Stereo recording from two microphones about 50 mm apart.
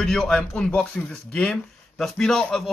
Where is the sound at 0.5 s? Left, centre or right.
Centre.